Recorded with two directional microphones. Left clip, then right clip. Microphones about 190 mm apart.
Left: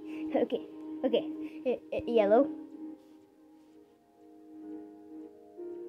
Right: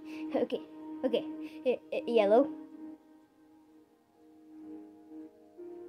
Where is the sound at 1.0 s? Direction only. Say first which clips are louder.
Left 2 dB; 25° right (ahead or behind).